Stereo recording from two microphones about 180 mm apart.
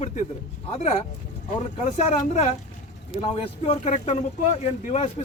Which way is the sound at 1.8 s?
40° left (ahead or behind).